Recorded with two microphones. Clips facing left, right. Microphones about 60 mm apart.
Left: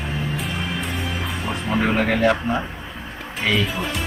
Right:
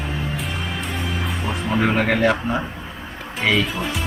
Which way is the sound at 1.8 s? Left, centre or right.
Right.